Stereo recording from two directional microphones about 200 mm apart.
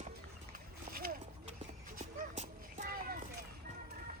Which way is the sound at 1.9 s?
40° right (ahead or behind).